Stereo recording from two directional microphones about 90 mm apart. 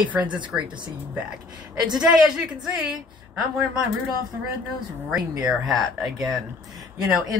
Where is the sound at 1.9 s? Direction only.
5° right (ahead or behind).